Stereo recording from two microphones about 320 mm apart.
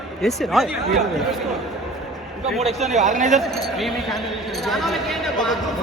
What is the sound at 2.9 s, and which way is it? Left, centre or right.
Speech, right.